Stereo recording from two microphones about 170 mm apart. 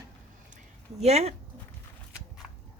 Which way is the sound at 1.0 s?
40° right (ahead or behind).